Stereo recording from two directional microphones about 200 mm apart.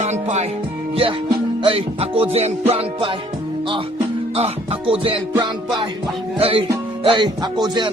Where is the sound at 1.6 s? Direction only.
30° right (ahead or behind).